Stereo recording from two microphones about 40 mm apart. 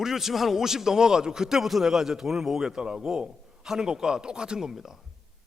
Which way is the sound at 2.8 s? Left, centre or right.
Right.